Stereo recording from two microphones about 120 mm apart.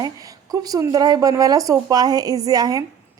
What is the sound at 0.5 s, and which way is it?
Speech, 30° right (ahead or behind).